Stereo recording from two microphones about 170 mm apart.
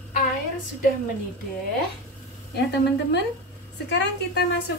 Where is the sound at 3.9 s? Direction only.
70° left (ahead or behind).